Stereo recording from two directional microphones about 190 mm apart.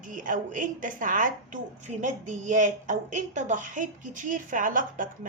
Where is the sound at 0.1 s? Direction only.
45° right (ahead or behind).